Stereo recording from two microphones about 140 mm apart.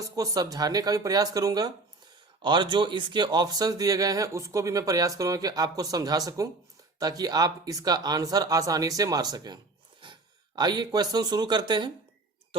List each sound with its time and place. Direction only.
0.0 s speech: 25° right (ahead or behind)